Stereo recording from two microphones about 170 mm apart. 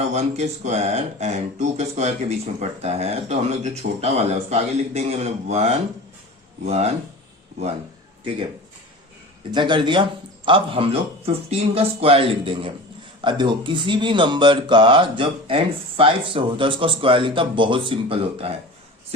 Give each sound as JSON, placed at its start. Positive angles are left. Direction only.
{"t": 0.1, "sound": "speech", "side_deg": -40}
{"t": 9.5, "sound": "speech", "side_deg": -30}